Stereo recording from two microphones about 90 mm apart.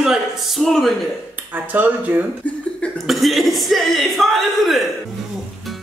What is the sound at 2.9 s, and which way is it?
A man's voice, centre (ahead or behind).